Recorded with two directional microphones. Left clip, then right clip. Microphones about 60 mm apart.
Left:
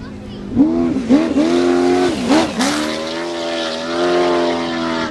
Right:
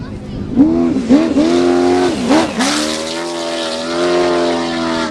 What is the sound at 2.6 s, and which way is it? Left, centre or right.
Vehicle, right.